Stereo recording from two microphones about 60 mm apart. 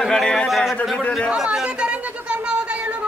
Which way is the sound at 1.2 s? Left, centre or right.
Centre.